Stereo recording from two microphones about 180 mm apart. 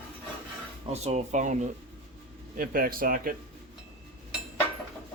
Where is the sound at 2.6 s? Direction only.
50° right (ahead or behind).